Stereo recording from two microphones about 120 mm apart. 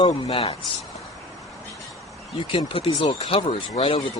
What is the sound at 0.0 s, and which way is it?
Speech, 50° left (ahead or behind).